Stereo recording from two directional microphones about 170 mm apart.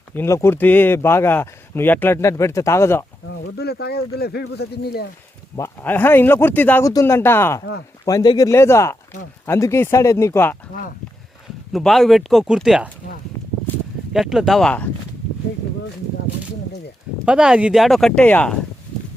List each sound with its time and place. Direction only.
0.1 s speech: 15° left (ahead or behind)
3.6 s speech: 70° left (ahead or behind)
5.5 s speech: 15° left (ahead or behind)
11.7 s speech: centre (ahead or behind)
14.1 s speech: centre (ahead or behind)
17.2 s speech: 5° right (ahead or behind)